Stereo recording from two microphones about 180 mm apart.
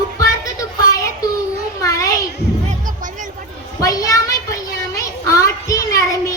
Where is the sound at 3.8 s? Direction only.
20° left (ahead or behind).